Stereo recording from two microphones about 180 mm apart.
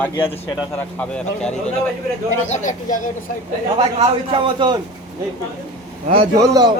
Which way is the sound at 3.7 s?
30° right (ahead or behind).